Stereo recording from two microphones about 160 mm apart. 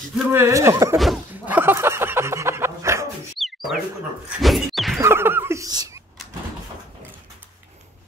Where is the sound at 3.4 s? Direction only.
Centre (ahead or behind).